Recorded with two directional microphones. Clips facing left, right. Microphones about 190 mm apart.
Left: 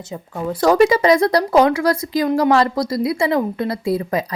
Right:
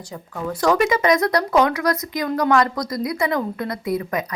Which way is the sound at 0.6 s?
35° left (ahead or behind).